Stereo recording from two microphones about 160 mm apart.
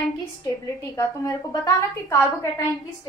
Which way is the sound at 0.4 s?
20° left (ahead or behind).